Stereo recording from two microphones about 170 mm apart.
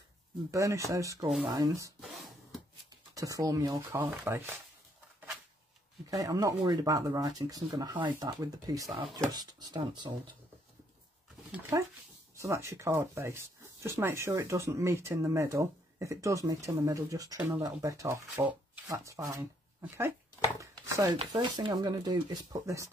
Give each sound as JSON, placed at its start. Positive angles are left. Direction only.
{"t": 0.5, "sound": "speech", "side_deg": -20}
{"t": 2.0, "sound": "a sound", "side_deg": 0}
{"t": 3.2, "sound": "speech", "side_deg": -20}
{"t": 6.0, "sound": "speech", "side_deg": -20}
{"t": 11.7, "sound": "speech", "side_deg": -15}
{"t": 20.8, "sound": "a sound", "side_deg": -20}
{"t": 21.3, "sound": "speech", "side_deg": -25}